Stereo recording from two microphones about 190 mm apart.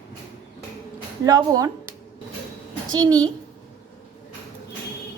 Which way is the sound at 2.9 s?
20° right (ahead or behind).